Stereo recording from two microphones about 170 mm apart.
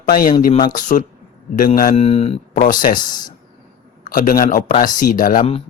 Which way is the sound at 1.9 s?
35° left (ahead or behind).